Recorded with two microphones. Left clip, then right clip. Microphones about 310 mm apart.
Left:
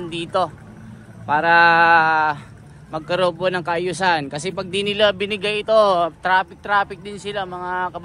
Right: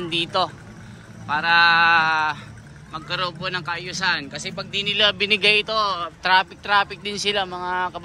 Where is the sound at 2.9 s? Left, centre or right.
Centre.